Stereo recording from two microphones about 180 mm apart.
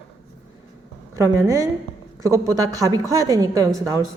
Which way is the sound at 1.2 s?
15° right (ahead or behind).